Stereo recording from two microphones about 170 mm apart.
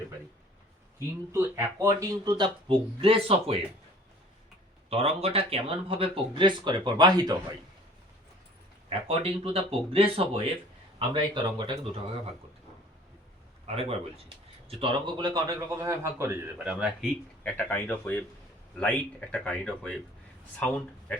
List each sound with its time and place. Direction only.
0.9 s speech: 15° right (ahead or behind); by 3.6 s 35° right (ahead or behind)
4.9 s speech: 35° right (ahead or behind)
8.9 s speech: 35° right (ahead or behind)
13.7 s a man's voice: 35° right (ahead or behind); by 17.1 s 5° right (ahead or behind)
17.4 s speech: 10° left (ahead or behind)